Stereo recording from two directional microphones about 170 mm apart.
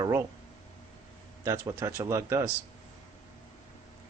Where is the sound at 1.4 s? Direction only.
15° right (ahead or behind).